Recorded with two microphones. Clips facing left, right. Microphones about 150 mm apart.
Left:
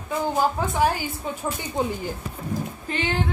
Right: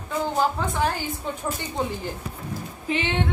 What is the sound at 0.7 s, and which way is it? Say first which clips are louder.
Speech: left 3 dB; 10° left (ahead or behind).